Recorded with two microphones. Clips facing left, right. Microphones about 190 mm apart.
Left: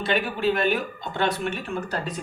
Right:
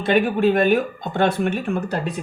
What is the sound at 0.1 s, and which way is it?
Speech, 50° right (ahead or behind).